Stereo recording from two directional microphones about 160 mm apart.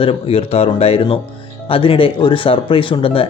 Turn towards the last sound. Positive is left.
turn(degrees=35)  # may be behind; listen again after turning